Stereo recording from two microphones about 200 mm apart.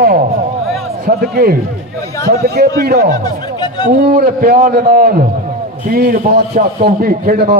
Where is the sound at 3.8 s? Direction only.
45° right (ahead or behind).